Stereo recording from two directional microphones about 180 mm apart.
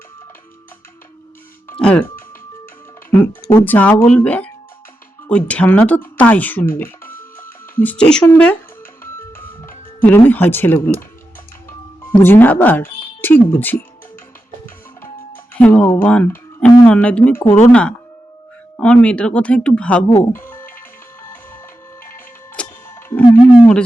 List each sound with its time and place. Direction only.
1.8 s speech: 10° left (ahead or behind)
3.1 s music: 15° left (ahead or behind)
3.7 s speech: 10° left (ahead or behind)
7.2 s music: 10° left (ahead or behind)
10.0 s speech: 10° left (ahead or behind)
12.0 s speech: 10° left (ahead or behind)
15.5 s speech: 5° left (ahead or behind)
20.4 s music: 10° left (ahead or behind)
22.0 s music: 15° left (ahead or behind)
23.0 s a sound: 10° left (ahead or behind)